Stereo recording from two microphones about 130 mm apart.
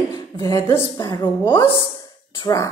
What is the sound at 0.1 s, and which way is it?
A woman's voice, 25° left (ahead or behind).